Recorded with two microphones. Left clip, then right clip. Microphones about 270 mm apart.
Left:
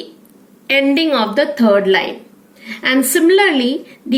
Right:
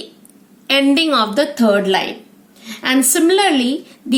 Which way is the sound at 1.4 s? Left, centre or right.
Centre.